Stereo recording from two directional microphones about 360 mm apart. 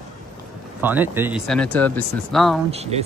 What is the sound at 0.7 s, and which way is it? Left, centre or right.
Speech, centre.